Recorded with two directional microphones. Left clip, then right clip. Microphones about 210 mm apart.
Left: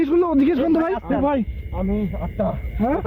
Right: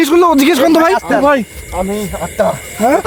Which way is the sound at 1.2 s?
40° right (ahead or behind).